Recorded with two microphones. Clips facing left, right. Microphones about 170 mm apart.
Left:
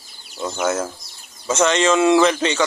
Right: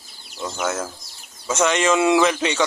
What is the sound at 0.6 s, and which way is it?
Speech, 10° left (ahead or behind).